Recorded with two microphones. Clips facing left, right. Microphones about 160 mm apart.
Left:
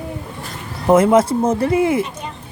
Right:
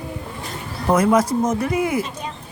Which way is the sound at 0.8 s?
25° left (ahead or behind).